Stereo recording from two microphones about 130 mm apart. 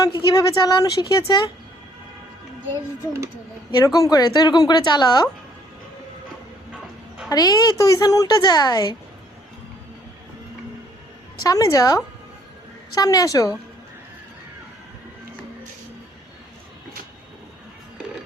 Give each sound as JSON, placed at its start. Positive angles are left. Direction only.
{"t": 0.0, "sound": "speech", "side_deg": 30}
{"t": 3.8, "sound": "speech", "side_deg": 25}
{"t": 7.3, "sound": "a woman's voice", "side_deg": 30}
{"t": 11.4, "sound": "a woman's voice", "side_deg": 25}